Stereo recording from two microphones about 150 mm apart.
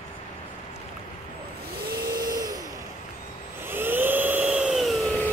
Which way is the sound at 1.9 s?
80° right.